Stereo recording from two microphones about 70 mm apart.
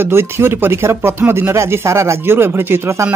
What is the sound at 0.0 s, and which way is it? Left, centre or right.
Speech, right.